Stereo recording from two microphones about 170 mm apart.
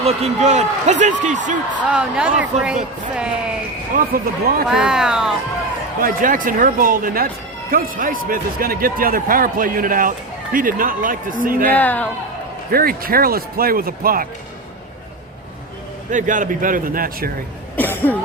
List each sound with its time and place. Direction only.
0.0 s a man's voice: 40° right (ahead or behind)
1.8 s speech: 5° right (ahead or behind)
3.9 s speech: 60° right (ahead or behind)
4.7 s speech: 5° right (ahead or behind)
6.0 s speech: 55° right (ahead or behind)
11.7 s speech: 10° left (ahead or behind)
12.7 s speech: 60° right (ahead or behind)
16.1 s a man's voice: 50° right (ahead or behind)
17.7 s speech: 10° left (ahead or behind)